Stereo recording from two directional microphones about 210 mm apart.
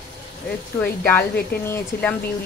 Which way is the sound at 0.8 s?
10° left (ahead or behind).